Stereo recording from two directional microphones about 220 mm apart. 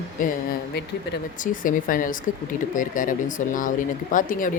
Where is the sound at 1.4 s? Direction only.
35° left (ahead or behind).